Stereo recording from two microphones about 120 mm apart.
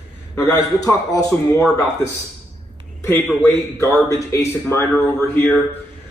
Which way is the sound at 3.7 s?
25° left (ahead or behind).